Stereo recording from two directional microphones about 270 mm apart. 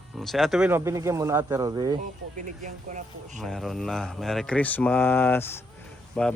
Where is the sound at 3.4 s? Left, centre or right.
Centre.